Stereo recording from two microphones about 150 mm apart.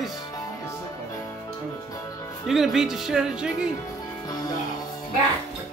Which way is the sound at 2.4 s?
Centre (ahead or behind).